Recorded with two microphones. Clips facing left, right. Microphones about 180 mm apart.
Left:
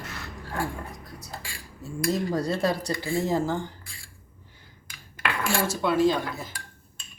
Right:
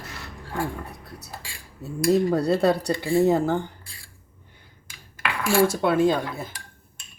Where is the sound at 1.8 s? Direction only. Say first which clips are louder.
Right 7 dB; 65° right (ahead or behind).